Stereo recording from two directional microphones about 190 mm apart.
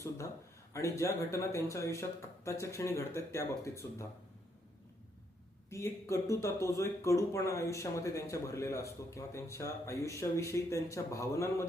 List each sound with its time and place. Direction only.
0.7 s speech: 15° left (ahead or behind)
5.7 s speech: 15° left (ahead or behind)